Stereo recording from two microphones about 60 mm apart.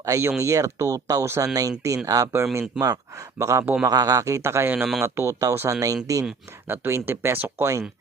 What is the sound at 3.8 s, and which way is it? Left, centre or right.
A man's voice, right.